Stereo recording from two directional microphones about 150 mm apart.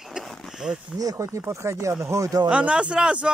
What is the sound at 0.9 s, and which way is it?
Speech, 20° right (ahead or behind).